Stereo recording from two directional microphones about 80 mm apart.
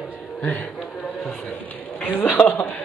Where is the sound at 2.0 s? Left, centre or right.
Left.